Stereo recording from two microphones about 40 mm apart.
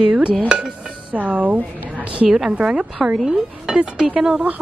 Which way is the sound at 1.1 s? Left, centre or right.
Right.